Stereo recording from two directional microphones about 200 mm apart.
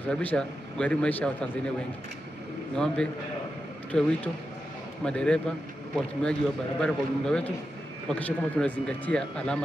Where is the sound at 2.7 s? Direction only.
5° left (ahead or behind).